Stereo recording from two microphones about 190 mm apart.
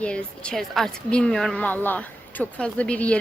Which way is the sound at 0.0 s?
5° left (ahead or behind).